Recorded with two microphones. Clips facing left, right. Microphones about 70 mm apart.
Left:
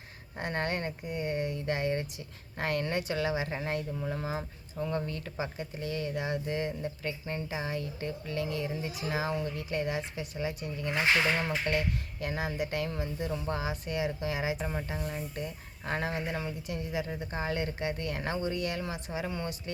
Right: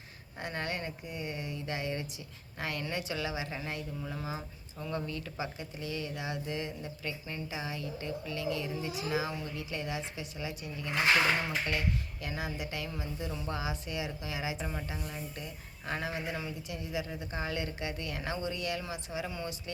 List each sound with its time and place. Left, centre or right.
0.3 s a woman's voice: left
12.2 s a woman's voice: left